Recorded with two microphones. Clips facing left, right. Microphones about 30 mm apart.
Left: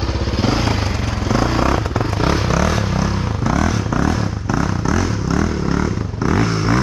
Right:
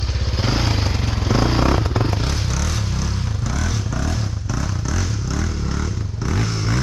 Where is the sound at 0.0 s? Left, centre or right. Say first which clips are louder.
Left 5 dB; centre.